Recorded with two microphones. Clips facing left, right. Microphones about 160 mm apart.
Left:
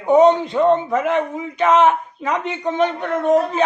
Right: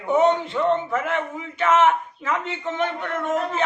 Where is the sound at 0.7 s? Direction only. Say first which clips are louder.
Left 5 dB; 20° left (ahead or behind).